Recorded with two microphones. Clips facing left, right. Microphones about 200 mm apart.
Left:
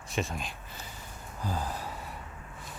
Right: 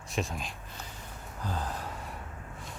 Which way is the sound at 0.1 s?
Centre (ahead or behind).